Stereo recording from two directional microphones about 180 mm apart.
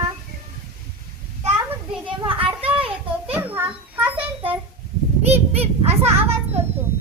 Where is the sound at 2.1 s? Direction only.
30° right (ahead or behind).